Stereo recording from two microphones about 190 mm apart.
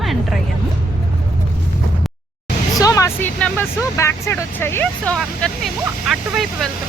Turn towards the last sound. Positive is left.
turn(degrees=0)  # may be behind; listen again after turning